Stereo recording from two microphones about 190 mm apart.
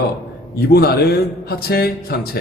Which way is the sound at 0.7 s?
60° left (ahead or behind).